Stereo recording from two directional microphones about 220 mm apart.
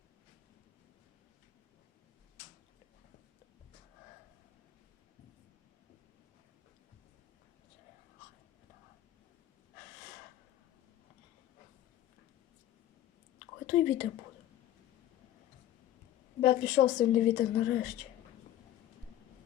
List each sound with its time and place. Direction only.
13.7 s speech: 45° left (ahead or behind)
16.4 s a woman's voice: 55° left (ahead or behind)